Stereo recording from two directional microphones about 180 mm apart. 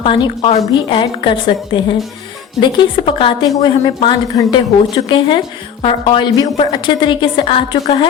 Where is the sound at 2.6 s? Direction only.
25° left (ahead or behind).